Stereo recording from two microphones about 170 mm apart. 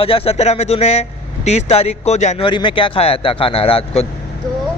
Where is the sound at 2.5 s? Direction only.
30° left (ahead or behind).